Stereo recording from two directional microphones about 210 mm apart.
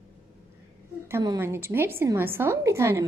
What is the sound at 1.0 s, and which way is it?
A woman's voice, 15° right (ahead or behind).